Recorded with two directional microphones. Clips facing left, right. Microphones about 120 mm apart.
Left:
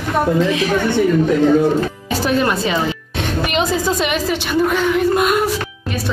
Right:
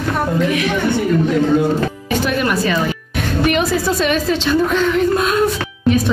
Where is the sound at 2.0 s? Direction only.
30° left (ahead or behind).